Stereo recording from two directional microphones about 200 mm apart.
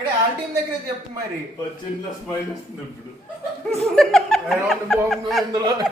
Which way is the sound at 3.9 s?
5° left (ahead or behind).